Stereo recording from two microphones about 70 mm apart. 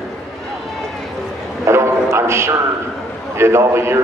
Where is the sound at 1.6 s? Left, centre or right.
Right.